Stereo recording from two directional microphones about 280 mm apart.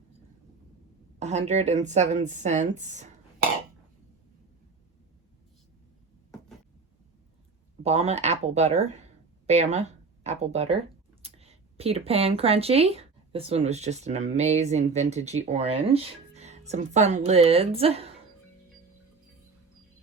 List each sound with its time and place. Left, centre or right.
1.2 s speech: right
7.8 s speech: right